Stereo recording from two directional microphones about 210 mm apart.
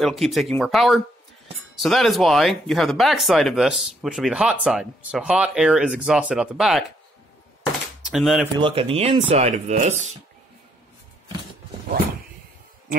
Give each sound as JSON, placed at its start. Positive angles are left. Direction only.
{"t": 0.0, "sound": "speech", "side_deg": 0}
{"t": 8.0, "sound": "speech", "side_deg": 0}
{"t": 8.5, "sound": "speech", "side_deg": -25}